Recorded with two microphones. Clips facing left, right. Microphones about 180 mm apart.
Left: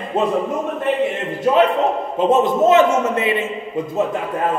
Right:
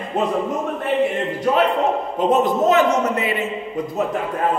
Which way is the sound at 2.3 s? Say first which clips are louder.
Left 3 dB; 25° left (ahead or behind).